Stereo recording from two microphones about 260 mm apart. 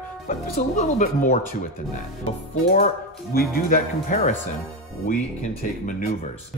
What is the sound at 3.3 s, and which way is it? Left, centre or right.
Speech, left.